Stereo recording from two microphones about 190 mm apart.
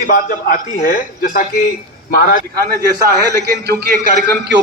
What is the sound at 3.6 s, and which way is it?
Speech, 55° right (ahead or behind).